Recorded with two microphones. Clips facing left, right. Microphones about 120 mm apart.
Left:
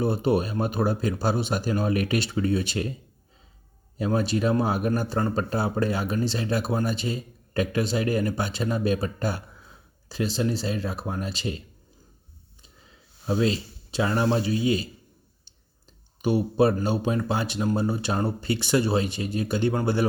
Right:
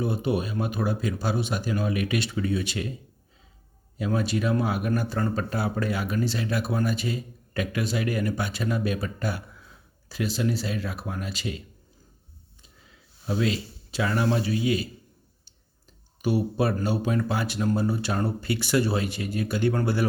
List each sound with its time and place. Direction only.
0.0 s speech: 35° left (ahead or behind)
3.9 s speech: 35° left (ahead or behind)
13.2 s speech: 30° left (ahead or behind)
16.2 s speech: 20° left (ahead or behind)